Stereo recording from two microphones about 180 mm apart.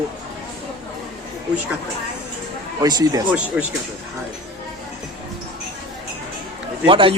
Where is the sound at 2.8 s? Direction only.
20° right (ahead or behind).